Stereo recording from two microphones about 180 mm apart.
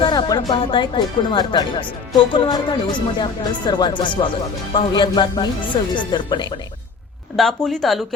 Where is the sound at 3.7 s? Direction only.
25° left (ahead or behind).